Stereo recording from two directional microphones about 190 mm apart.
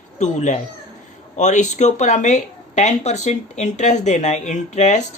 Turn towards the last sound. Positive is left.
turn(degrees=35)  # may be behind; listen again after turning